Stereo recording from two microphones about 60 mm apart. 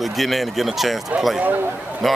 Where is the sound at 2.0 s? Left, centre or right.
Centre.